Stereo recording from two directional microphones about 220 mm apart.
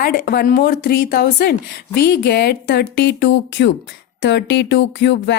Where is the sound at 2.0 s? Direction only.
45° left (ahead or behind).